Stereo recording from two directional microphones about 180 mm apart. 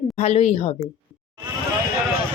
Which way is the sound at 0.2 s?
35° left (ahead or behind).